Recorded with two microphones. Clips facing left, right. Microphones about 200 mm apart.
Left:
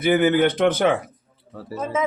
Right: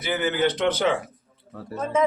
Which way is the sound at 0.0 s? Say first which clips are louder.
Left 6 dB; 55° left (ahead or behind).